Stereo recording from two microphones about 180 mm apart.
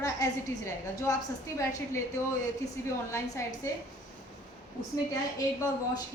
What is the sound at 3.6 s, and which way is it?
Speech, 15° left (ahead or behind).